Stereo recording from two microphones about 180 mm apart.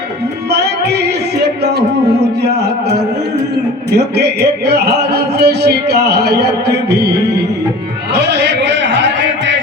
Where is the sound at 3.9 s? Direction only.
65° right (ahead or behind).